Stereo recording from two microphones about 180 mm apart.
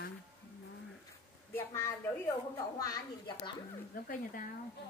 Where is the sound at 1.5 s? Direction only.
15° left (ahead or behind).